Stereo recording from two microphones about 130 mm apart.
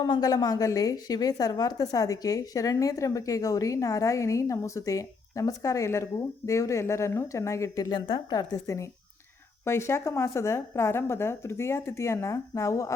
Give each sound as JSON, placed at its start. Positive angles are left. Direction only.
{"t": 0.0, "sound": "a woman's voice", "side_deg": 30}